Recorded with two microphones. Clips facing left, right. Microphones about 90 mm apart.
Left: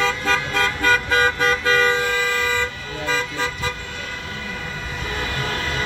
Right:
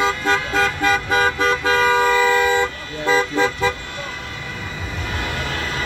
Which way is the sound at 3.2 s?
65° right (ahead or behind).